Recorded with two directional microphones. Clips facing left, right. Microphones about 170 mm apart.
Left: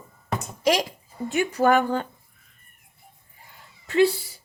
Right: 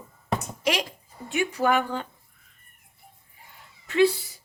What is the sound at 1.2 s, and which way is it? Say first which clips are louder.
Speech: left 4 dB; 45° left (ahead or behind).